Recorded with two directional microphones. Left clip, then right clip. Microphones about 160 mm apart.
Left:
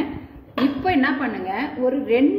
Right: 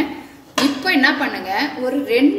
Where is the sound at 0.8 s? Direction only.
35° left (ahead or behind).